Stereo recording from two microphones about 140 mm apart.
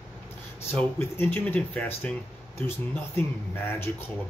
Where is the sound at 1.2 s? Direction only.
15° left (ahead or behind).